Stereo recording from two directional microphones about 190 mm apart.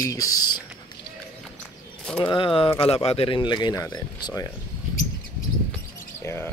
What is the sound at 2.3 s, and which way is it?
Speech, 25° left (ahead or behind).